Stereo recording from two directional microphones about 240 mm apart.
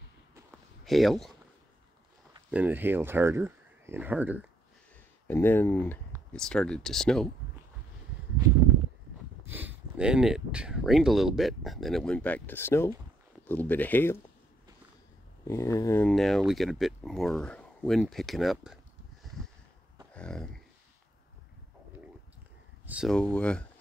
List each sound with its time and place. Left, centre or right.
0.8 s speech: centre
2.5 s speech: centre
5.3 s speech: centre
9.5 s speech: centre
15.4 s speech: centre
20.2 s a sound: centre
22.8 s speech: centre